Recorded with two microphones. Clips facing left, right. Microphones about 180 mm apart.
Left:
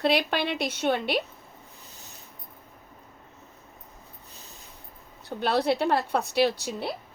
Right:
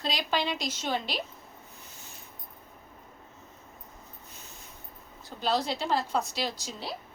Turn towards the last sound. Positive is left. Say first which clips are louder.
# left 10 dB
turn(degrees=60)  # may be behind; listen again after turning